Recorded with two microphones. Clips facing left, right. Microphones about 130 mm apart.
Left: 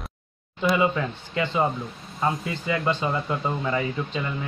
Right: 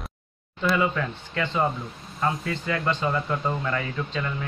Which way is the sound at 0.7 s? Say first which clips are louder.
Left 2 dB; 15° left (ahead or behind).